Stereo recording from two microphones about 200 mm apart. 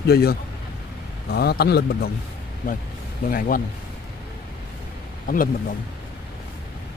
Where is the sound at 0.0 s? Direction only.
50° left (ahead or behind).